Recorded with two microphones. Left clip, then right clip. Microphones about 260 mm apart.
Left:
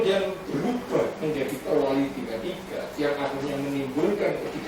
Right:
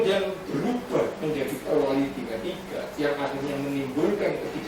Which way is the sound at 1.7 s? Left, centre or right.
Left.